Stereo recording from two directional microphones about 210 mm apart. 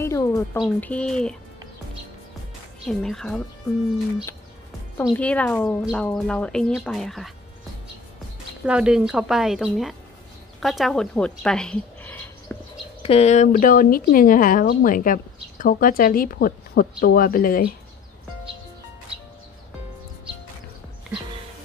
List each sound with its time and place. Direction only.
0.0 s music: 15° left (ahead or behind)
0.6 s speech: 5° left (ahead or behind)
2.9 s speech: 5° left (ahead or behind)
5.1 s speech: 5° left (ahead or behind)
8.6 s speech: 5° right (ahead or behind)
13.0 s speech: 30° left (ahead or behind)